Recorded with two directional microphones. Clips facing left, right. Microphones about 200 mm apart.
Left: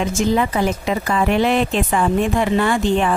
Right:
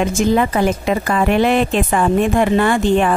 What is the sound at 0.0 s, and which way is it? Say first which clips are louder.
A woman's voice: right 3 dB; 55° right (ahead or behind).